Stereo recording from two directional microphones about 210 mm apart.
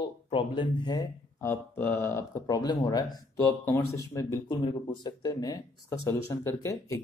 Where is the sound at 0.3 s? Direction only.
25° left (ahead or behind).